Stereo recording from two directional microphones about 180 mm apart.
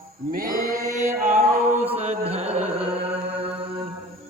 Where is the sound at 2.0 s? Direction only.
35° right (ahead or behind).